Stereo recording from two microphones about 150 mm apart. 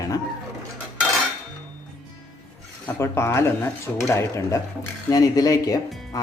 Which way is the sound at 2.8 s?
15° left (ahead or behind).